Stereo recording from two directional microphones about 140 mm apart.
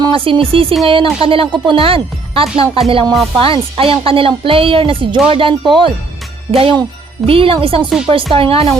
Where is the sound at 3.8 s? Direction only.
40° right (ahead or behind).